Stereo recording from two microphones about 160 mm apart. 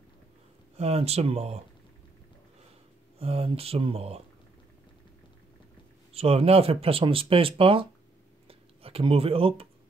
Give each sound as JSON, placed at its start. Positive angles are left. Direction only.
{"t": 0.7, "sound": "speech", "side_deg": -40}
{"t": 3.2, "sound": "speech", "side_deg": -35}
{"t": 6.1, "sound": "speech", "side_deg": -40}
{"t": 8.5, "sound": "a sound", "side_deg": -35}